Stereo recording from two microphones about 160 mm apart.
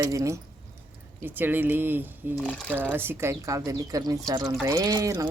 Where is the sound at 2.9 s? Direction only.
15° right (ahead or behind).